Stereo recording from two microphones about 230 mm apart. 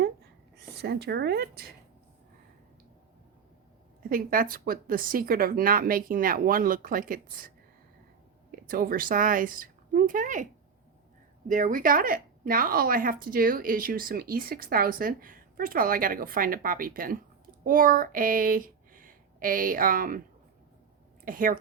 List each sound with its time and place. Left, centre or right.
0.8 s speech: right
4.1 s speech: right
8.6 s speech: right
21.2 s speech: right